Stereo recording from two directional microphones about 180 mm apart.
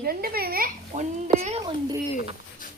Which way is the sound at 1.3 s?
35° right (ahead or behind).